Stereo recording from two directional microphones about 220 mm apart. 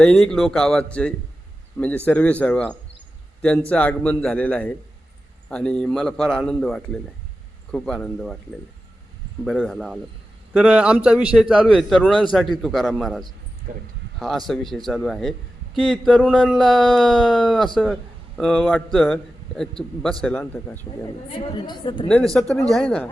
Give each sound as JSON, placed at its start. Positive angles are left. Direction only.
{"t": 0.0, "sound": "a man's voice", "side_deg": 5}
{"t": 9.4, "sound": "a man's voice", "side_deg": 0}
{"t": 21.7, "sound": "speech", "side_deg": 20}
{"t": 22.1, "sound": "a man's voice", "side_deg": 0}